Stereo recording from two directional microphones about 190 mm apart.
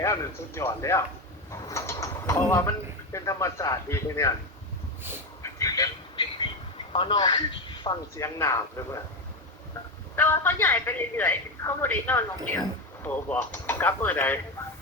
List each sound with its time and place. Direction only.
0.0 s speech: 15° left (ahead or behind)
5.4 s a sound: 15° left (ahead or behind)
6.9 s a man's voice: 25° left (ahead or behind)
10.2 s speech: 10° left (ahead or behind)